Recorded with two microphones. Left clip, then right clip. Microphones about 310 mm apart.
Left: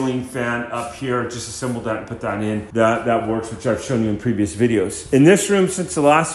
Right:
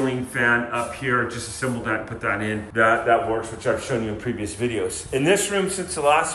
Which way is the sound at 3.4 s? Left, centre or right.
Left.